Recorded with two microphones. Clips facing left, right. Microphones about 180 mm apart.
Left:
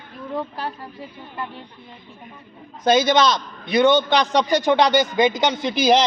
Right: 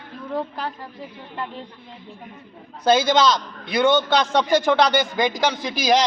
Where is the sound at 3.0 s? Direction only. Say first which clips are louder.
Even; 20° left (ahead or behind).